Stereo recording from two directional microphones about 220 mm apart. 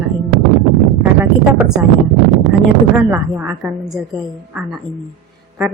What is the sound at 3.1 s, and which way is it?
A woman's voice, 10° right (ahead or behind).